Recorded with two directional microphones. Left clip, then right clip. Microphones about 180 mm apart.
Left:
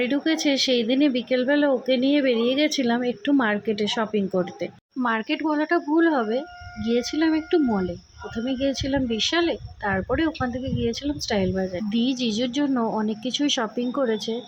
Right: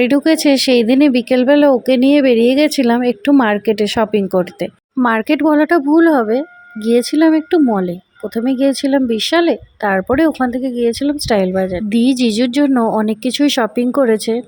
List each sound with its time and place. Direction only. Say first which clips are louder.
0.0 s speech: right 10 dB; 35° right (ahead or behind)